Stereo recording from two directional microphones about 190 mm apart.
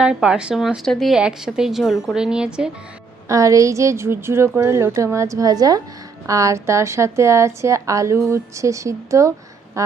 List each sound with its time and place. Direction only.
0.0 s a woman's voice: 5° right (ahead or behind)
3.2 s a woman's voice: 15° right (ahead or behind)